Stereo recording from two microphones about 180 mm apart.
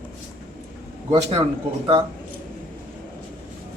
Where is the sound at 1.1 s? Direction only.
25° right (ahead or behind).